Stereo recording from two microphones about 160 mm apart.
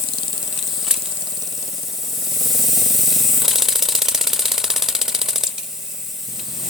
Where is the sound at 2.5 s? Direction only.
Centre (ahead or behind).